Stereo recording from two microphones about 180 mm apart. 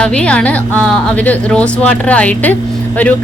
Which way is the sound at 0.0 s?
5° left (ahead or behind).